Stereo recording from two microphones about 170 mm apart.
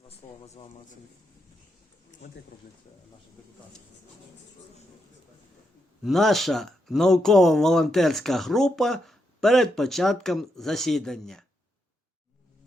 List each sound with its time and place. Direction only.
0.1 s speech: 40° left (ahead or behind)
2.2 s speech: 90° left
6.0 s speech: centre (ahead or behind)